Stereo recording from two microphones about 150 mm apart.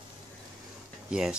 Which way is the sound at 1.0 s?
5° right (ahead or behind).